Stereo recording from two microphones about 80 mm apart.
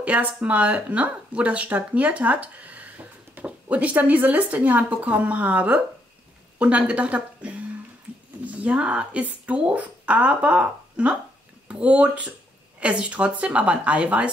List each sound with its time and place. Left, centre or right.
0.0 s speech: centre